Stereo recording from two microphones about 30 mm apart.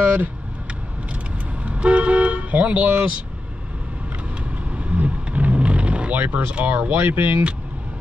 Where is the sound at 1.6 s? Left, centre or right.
Right.